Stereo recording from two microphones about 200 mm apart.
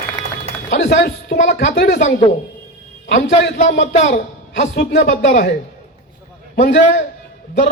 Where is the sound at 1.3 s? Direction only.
40° left (ahead or behind).